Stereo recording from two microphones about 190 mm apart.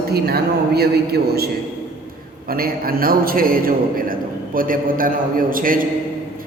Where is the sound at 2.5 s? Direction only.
50° right (ahead or behind).